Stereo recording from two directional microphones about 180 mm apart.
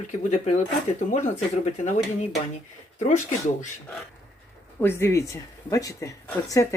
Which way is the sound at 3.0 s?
40° left (ahead or behind).